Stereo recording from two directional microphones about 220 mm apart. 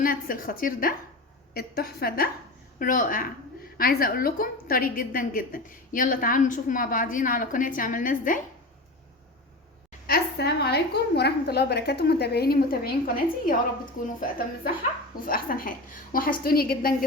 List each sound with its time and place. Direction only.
0.0 s a woman's voice: 40° left (ahead or behind)
10.1 s a woman's voice: 50° left (ahead or behind)